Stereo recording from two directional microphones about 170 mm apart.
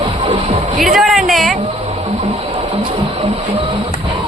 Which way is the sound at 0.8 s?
Centre (ahead or behind).